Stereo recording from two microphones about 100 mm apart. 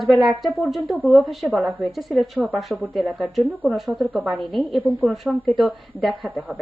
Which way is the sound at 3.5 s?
15° right (ahead or behind).